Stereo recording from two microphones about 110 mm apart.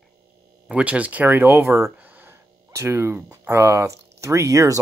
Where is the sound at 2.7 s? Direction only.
25° right (ahead or behind).